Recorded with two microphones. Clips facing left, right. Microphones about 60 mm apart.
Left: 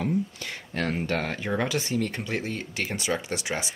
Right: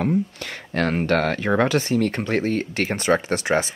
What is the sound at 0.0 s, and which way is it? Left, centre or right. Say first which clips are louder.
Speech: right 5 dB; right.